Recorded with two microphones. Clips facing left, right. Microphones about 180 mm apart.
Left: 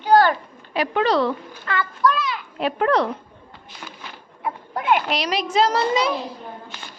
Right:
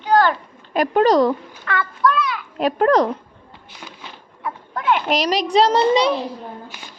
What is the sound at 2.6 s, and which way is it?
Speech, 40° right (ahead or behind).